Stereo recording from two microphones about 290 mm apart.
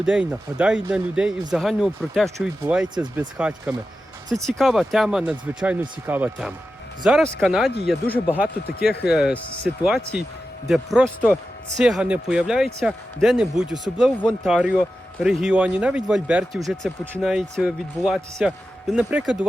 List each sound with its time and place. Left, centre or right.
0.0 s speech: centre
11.0 s speech: centre